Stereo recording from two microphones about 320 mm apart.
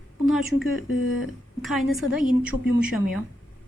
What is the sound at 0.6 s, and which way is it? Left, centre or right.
Speech, left.